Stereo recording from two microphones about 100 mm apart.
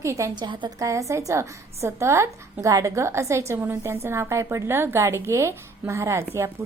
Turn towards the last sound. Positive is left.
turn(degrees=-30)  # may be behind; listen again after turning